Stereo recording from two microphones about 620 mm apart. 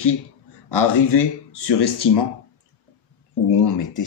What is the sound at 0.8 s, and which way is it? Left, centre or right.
Speech, left.